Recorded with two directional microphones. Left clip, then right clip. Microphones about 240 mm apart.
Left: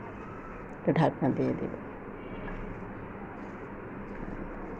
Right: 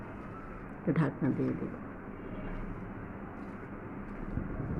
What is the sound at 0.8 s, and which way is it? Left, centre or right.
Speech, centre.